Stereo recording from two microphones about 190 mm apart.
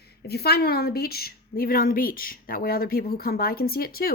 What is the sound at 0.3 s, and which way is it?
A woman's voice, 55° left (ahead or behind).